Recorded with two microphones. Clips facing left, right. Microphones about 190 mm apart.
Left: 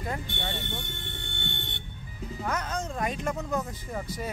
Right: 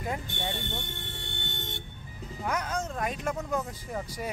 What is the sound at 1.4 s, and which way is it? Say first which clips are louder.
Vehicle: left 2 dB; 40° right (ahead or behind).